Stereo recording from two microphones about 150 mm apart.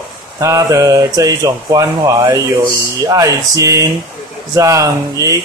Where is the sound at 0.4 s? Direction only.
20° right (ahead or behind).